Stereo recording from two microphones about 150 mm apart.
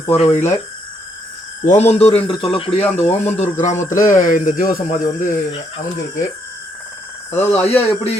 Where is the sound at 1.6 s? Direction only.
50° left (ahead or behind).